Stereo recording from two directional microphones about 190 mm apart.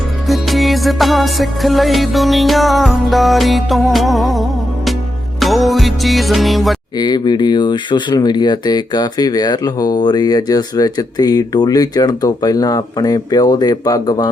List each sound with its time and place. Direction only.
0.3 s music: centre (ahead or behind)
6.9 s speech: 20° left (ahead or behind)